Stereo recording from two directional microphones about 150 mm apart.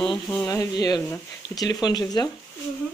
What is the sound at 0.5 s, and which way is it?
Speech, 25° left (ahead or behind).